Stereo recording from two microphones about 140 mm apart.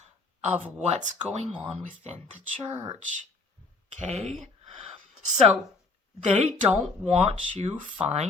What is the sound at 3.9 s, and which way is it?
Speech, 50° right (ahead or behind).